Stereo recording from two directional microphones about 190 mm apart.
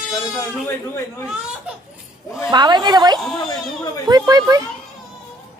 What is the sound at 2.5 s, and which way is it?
A woman's voice, 20° right (ahead or behind).